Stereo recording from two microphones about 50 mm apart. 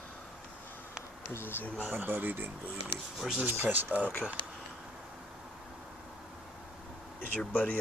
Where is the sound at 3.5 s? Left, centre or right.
Right.